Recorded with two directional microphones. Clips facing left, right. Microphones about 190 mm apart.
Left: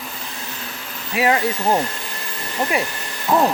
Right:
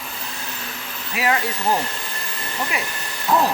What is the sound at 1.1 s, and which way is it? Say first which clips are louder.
Hair dryer: left 4 dB; 25° left (ahead or behind).